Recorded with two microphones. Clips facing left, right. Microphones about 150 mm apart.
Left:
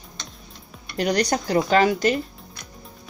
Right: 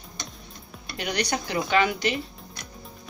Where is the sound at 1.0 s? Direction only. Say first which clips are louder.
Left 6 dB; 40° left (ahead or behind).